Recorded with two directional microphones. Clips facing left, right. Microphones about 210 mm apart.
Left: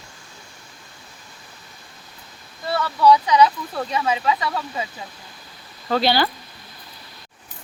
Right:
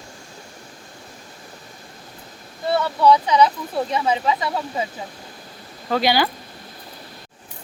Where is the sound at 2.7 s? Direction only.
25° right (ahead or behind).